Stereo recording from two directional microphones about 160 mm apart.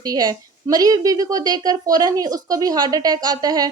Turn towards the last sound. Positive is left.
turn(degrees=-25)  # may be behind; listen again after turning